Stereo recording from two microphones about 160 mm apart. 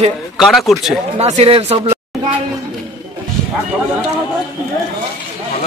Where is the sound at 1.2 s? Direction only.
40° right (ahead or behind).